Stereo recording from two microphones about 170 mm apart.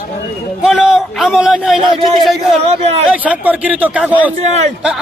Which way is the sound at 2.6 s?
40° right (ahead or behind).